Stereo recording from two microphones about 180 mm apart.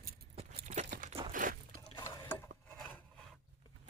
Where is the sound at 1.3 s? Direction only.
50° right (ahead or behind).